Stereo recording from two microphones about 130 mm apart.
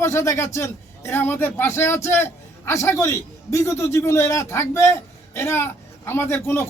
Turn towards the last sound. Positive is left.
turn(degrees=20)  # may be behind; listen again after turning